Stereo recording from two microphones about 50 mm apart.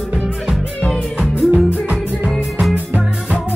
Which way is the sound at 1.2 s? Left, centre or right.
Right.